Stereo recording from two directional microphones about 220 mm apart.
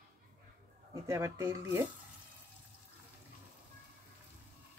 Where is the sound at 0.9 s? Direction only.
15° right (ahead or behind).